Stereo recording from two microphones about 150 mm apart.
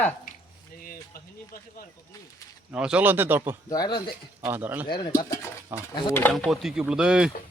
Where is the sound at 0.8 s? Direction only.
75° left (ahead or behind).